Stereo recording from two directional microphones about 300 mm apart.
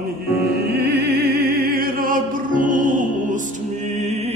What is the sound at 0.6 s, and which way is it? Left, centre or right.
Opera, right.